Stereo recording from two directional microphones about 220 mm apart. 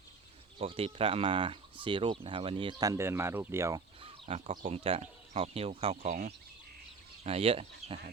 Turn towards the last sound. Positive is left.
turn(degrees=-30)  # may be behind; listen again after turning